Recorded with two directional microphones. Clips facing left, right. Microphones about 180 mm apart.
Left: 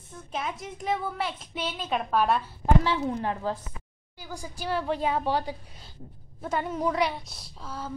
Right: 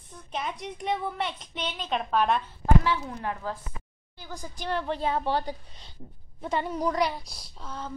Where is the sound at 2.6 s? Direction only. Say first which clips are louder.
Left 1 dB; 25° left (ahead or behind).